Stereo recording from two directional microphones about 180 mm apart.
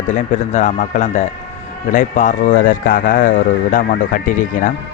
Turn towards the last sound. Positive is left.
turn(degrees=45)  # may be behind; listen again after turning